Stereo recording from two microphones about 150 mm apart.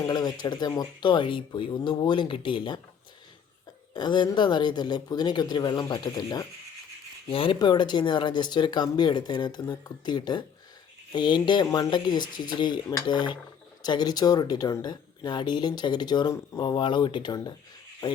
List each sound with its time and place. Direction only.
0.1 s speech: 25° left (ahead or behind)
3.9 s speech: 30° left (ahead or behind)
7.3 s speech: 35° left (ahead or behind)